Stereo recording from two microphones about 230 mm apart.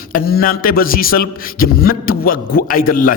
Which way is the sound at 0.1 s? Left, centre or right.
Left.